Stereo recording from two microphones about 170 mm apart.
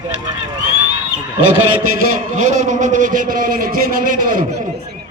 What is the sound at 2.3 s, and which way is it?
A man's voice, 45° right (ahead or behind).